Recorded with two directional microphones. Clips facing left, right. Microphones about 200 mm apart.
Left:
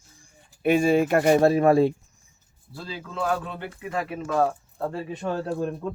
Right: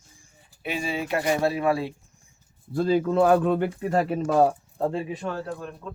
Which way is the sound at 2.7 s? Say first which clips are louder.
Right 14 dB; 55° right (ahead or behind).